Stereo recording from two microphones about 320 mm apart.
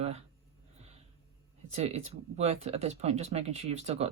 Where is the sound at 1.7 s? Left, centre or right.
Centre.